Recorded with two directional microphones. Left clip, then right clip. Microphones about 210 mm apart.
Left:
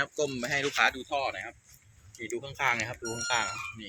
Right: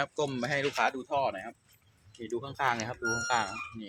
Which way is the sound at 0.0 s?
55° right (ahead or behind).